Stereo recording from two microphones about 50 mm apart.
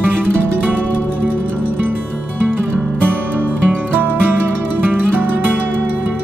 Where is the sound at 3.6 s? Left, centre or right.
Right.